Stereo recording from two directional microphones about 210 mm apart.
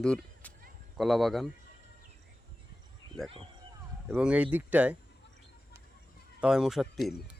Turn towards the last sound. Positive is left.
turn(degrees=0)  # may be behind; listen again after turning